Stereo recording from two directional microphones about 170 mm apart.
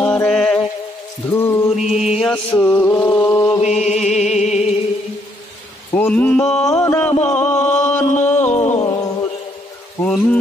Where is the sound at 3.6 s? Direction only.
45° left (ahead or behind).